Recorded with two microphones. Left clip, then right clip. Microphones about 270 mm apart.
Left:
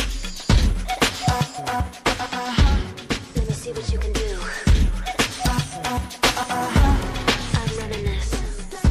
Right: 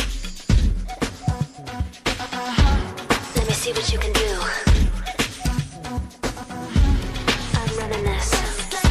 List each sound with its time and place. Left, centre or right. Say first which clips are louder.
0.5 s music: left 4 dB; centre
0.8 s music: left 8 dB; left
2.0 s music: even; centre
3.1 s music: right 7 dB; right; by 4.8 s centre
5.0 s music: left 4 dB; centre
5.8 s music: left 8 dB; left; by 8.5 s right